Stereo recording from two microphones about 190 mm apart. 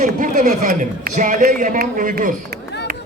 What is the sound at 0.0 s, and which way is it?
A man's voice, 40° right (ahead or behind).